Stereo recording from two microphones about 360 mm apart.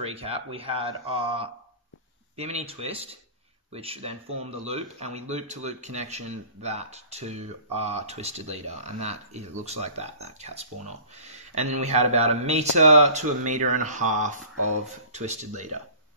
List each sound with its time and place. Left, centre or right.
0.0 s speech: centre